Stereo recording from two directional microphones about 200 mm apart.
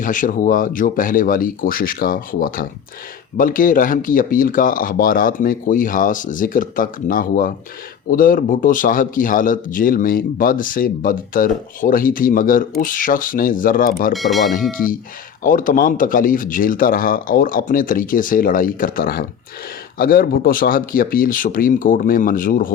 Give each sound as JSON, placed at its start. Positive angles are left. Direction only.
{"t": 0.0, "sound": "speech", "side_deg": 40}
{"t": 14.1, "sound": "speech", "side_deg": 0}
{"t": 15.4, "sound": "speech", "side_deg": 40}